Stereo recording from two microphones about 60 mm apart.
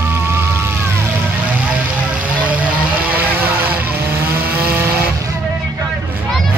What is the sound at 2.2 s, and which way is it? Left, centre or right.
Vehicle, right.